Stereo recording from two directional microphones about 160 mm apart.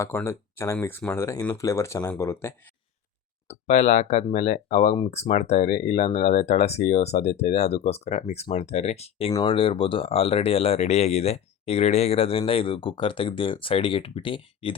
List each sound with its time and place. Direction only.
0.0 s speech: 15° left (ahead or behind)
3.5 s speech: 45° left (ahead or behind)